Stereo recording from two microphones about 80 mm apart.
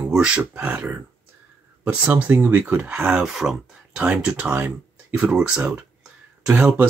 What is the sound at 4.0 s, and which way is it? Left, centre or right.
Speech, centre.